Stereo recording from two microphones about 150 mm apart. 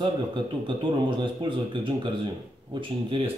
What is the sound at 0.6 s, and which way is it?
Speech, 30° right (ahead or behind).